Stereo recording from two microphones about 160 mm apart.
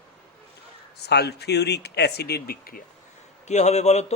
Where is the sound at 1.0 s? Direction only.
90° left; by 2.8 s 70° left (ahead or behind).